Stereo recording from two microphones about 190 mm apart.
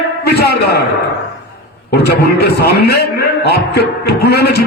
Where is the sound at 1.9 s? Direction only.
55° left (ahead or behind).